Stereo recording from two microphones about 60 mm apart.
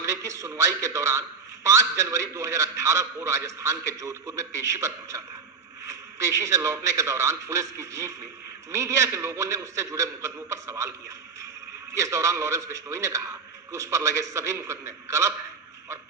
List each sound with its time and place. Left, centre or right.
0.0 s a man's voice: right
11.9 s a man's voice: right